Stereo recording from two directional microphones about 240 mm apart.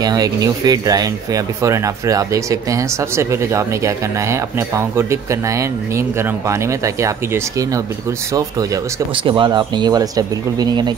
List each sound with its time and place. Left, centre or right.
0.0 s speech: centre